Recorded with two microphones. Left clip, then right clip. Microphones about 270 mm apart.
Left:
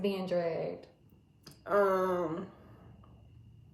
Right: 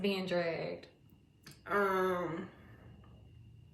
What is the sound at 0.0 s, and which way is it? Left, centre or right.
Speech, right.